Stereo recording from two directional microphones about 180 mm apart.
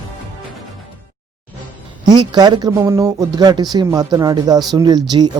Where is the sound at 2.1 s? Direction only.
25° right (ahead or behind).